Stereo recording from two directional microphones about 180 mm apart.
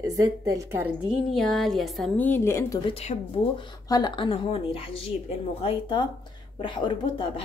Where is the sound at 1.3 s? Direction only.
Centre (ahead or behind).